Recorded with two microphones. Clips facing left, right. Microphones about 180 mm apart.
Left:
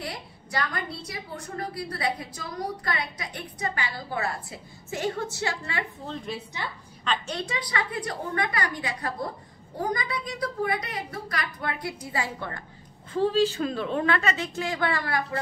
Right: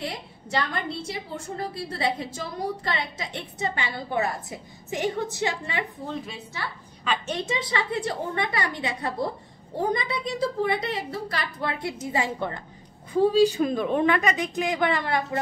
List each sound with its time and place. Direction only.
0.0 s a woman's voice: 25° right (ahead or behind)
6.6 s a woman's voice: 20° left (ahead or behind)
7.2 s a woman's voice: 20° right (ahead or behind)